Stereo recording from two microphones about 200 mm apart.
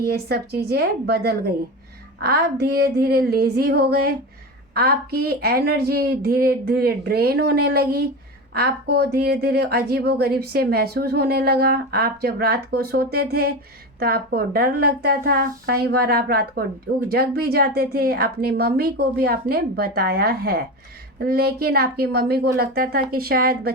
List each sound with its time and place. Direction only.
0.0 s speech: 50° right (ahead or behind)